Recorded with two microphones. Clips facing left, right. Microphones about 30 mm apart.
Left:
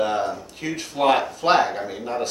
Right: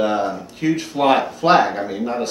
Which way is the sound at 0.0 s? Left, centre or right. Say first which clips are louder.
Right 3 dB; centre.